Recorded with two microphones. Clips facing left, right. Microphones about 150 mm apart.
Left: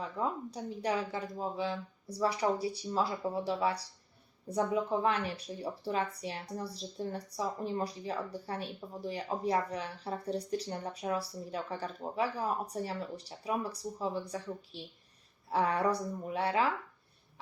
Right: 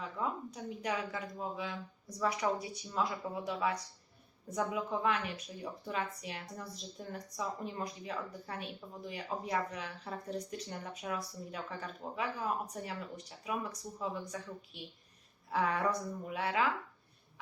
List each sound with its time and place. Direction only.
0.0 s a woman's voice: 30° left (ahead or behind)